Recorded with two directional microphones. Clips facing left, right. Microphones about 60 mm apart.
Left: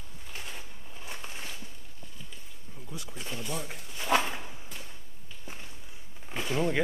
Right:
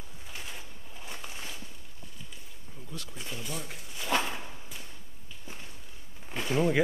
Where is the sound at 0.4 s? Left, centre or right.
Centre.